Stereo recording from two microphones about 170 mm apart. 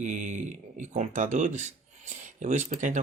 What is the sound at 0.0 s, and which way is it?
Speech, 45° right (ahead or behind).